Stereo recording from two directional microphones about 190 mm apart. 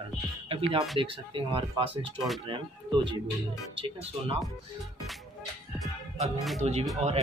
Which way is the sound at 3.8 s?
30° right (ahead or behind).